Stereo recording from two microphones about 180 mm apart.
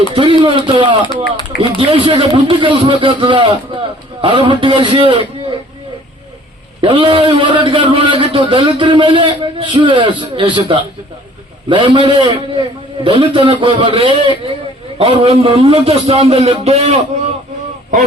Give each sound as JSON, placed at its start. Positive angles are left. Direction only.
{"t": 0.1, "sound": "a man's voice", "side_deg": -30}
{"t": 1.0, "sound": "speech", "side_deg": 25}
{"t": 1.5, "sound": "a man's voice", "side_deg": -30}
{"t": 6.8, "sound": "a man's voice", "side_deg": -30}